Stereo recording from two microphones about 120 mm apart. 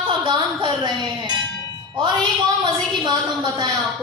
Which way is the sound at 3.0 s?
35° right (ahead or behind).